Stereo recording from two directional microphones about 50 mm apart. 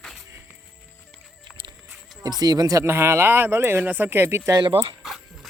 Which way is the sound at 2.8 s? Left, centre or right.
Right.